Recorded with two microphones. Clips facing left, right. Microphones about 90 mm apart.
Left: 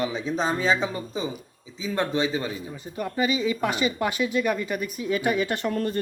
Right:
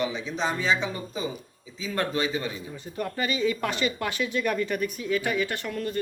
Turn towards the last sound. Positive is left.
turn(degrees=40)  # may be behind; listen again after turning